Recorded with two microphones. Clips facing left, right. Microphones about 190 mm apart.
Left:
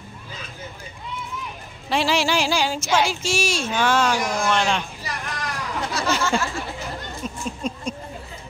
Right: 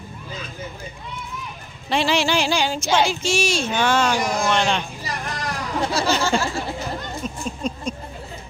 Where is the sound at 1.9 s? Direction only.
5° left (ahead or behind).